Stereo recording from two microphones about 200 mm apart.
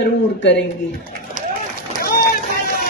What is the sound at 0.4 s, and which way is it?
Speech, 60° left (ahead or behind).